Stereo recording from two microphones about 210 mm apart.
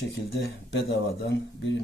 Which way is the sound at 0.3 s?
55° left (ahead or behind).